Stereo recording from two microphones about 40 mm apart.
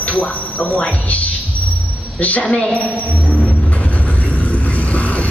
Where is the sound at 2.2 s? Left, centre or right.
Left.